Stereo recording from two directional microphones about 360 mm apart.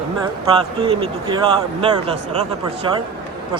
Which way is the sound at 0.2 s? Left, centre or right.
Centre.